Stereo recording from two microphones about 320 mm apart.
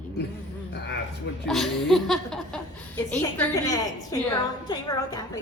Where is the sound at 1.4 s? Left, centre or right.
Centre.